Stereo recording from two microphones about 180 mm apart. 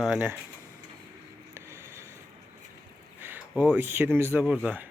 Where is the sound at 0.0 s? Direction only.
5° right (ahead or behind).